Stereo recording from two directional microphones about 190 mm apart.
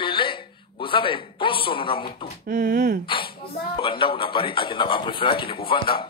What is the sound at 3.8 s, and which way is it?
A man's voice, 25° left (ahead or behind).